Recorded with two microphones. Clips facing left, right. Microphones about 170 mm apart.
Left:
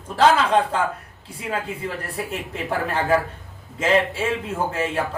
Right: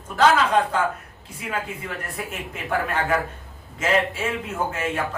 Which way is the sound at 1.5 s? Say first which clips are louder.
Left 3 dB; 30° left (ahead or behind).